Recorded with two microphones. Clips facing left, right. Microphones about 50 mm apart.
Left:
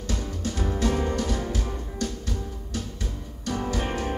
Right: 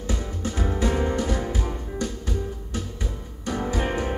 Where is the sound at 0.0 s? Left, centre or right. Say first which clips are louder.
Right 1 dB; right.